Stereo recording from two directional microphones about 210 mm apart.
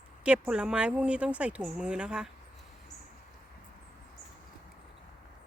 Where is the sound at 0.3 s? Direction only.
5° right (ahead or behind).